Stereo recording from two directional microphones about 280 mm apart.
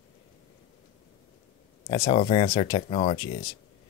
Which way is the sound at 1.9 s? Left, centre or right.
Left.